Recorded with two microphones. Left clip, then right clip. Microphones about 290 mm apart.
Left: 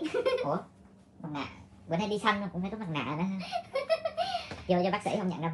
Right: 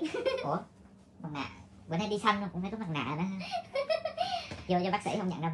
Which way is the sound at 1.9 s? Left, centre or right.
Right.